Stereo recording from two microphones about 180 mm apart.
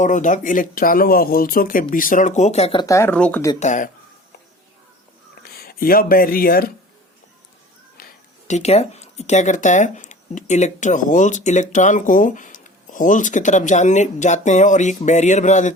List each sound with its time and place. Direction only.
0.0 s speech: 45° left (ahead or behind)
2.8 s speech: 15° left (ahead or behind)
3.6 s speech: 45° left (ahead or behind)
5.5 s speech: 55° left (ahead or behind)
8.0 s a sound: 55° left (ahead or behind)
8.4 s speech: 40° left (ahead or behind)